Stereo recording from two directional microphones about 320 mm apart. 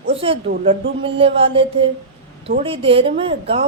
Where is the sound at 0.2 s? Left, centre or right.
Centre.